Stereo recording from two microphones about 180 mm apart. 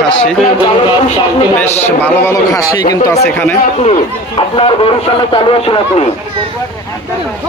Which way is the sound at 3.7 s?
35° left (ahead or behind).